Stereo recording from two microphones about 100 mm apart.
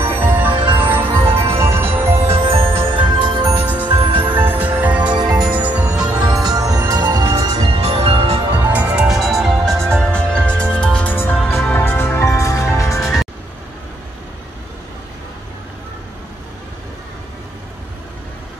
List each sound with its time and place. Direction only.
0.0 s music: 20° right (ahead or behind)
0.5 s music: 55° right (ahead or behind)
0.7 s music: 20° right (ahead or behind)
1.2 s music: 70° right (ahead or behind)
1.5 s music: 25° right (ahead or behind)
2.2 s music: 70° right (ahead or behind)
2.8 s music: 55° right (ahead or behind)
4.3 s music: 20° right (ahead or behind)
5.1 s music: 45° right (ahead or behind)
5.5 s music: 15° right (ahead or behind)
6.2 s music: 45° right (ahead or behind)
7.8 s music: 75° right (ahead or behind)
8.7 s music: 10° right (ahead or behind); by 13.1 s 30° left (ahead or behind)